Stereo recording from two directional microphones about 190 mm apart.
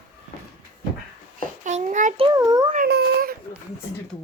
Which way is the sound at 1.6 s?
40° right (ahead or behind).